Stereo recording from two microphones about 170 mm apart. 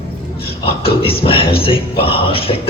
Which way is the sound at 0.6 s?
35° left (ahead or behind).